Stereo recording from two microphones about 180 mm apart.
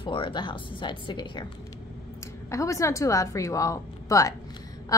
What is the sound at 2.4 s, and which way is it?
Speech, 15° left (ahead or behind).